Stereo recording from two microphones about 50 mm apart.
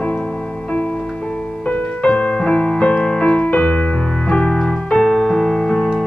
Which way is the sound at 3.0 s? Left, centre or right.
Centre.